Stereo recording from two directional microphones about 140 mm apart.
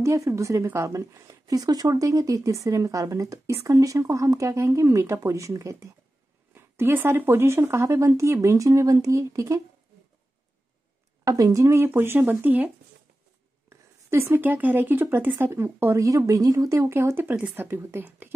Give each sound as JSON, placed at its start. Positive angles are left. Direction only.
{"t": 0.0, "sound": "a woman's voice", "side_deg": -20}
{"t": 11.2, "sound": "speech", "side_deg": -25}